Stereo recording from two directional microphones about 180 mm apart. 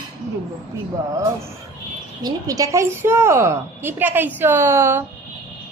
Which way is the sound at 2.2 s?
20° right (ahead or behind).